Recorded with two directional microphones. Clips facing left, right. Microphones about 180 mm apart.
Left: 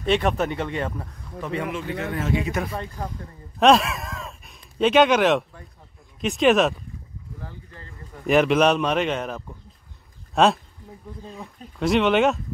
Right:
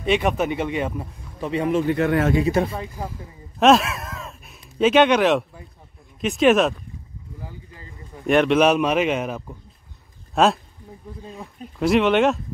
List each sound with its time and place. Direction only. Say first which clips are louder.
0.0 s speech: right 1 dB; 10° right (ahead or behind)
1.6 s speech: right 11 dB; 35° right (ahead or behind)
1.9 s speech: right 8 dB; 65° right (ahead or behind)
2.3 s speech: right 5 dB; 30° right (ahead or behind)
2.7 s a man's voice: right 1 dB; 5° right (ahead or behind)
7.4 s speech: right 2 dB; 10° right (ahead or behind)
8.3 s a man's voice: right 1 dB; centre (ahead or behind)